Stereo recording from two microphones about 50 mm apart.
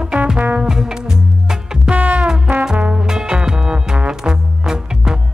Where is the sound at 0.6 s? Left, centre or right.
Centre.